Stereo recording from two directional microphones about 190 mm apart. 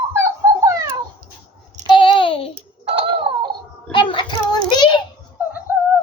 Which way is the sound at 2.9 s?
25° right (ahead or behind).